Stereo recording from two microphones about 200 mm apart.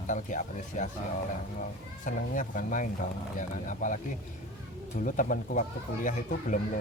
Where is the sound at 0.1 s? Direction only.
40° left (ahead or behind).